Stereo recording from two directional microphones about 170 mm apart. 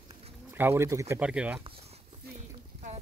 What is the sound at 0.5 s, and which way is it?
Speech, 15° right (ahead or behind).